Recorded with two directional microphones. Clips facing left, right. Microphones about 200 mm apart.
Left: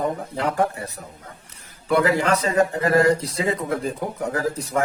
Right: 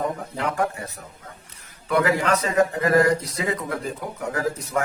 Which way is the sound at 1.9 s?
30° left (ahead or behind).